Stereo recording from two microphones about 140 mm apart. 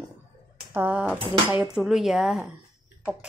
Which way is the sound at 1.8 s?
5° right (ahead or behind).